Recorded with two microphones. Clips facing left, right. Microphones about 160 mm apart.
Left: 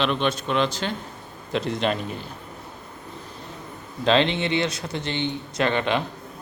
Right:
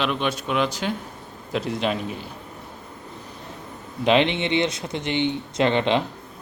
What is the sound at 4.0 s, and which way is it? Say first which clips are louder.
Speech: right 1 dB; 15° right (ahead or behind).